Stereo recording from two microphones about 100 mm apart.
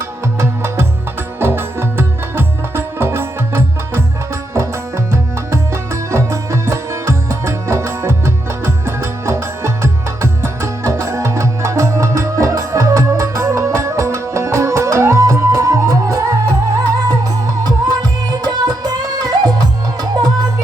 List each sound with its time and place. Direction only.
0.3 s music: 25° right (ahead or behind)
5.1 s music: 25° right (ahead or behind)